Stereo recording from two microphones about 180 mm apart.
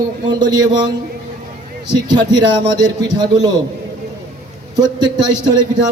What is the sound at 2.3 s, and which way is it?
A man's voice, 25° right (ahead or behind).